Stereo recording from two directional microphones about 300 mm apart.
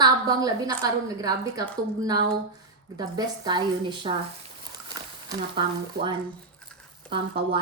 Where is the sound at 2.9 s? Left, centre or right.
Centre.